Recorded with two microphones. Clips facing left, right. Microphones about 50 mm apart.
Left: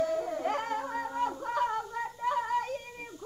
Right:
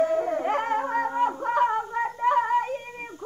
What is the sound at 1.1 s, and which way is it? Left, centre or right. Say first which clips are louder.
Child singing: right 5 dB; right.